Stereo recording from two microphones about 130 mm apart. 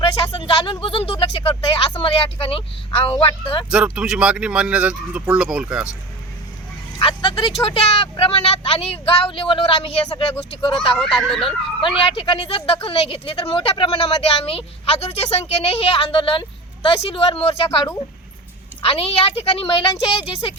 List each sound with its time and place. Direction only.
0.0 s speech: 40° left (ahead or behind)
3.7 s speech: 5° right (ahead or behind)
7.0 s speech: 40° left (ahead or behind)
11.2 s speech: 5° left (ahead or behind)
11.4 s speech: 40° left (ahead or behind)
18.8 s speech: 45° left (ahead or behind)